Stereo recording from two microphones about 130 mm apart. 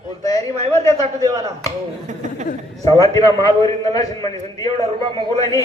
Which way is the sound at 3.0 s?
25° left (ahead or behind).